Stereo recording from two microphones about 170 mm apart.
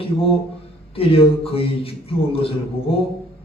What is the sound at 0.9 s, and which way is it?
A man's voice, 35° left (ahead or behind).